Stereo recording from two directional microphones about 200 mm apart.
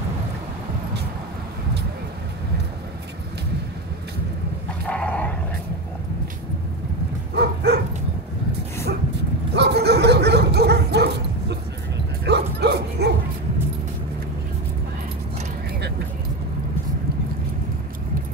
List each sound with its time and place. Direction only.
4.8 s dog: 5° left (ahead or behind)
7.3 s dog: 55° right (ahead or behind)
9.5 s bow-wow: 55° right (ahead or behind)